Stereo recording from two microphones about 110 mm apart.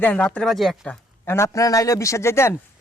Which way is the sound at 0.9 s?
20° left (ahead or behind).